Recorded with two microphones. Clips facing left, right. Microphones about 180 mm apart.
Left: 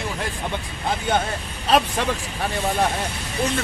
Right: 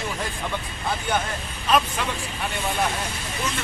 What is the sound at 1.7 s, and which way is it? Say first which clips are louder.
Speech: left 3 dB; 35° left (ahead or behind).